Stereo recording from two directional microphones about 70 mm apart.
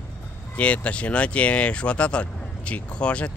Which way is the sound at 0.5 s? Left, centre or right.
Centre.